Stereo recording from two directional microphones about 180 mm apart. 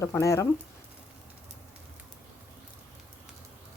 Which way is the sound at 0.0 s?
15° left (ahead or behind).